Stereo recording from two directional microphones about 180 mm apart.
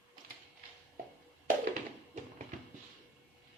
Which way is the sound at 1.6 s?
50° right (ahead or behind).